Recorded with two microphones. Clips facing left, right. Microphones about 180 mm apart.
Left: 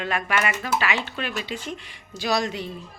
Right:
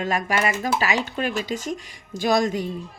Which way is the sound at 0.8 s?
40° right (ahead or behind).